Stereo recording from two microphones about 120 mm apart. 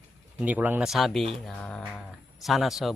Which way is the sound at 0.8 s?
Centre (ahead or behind).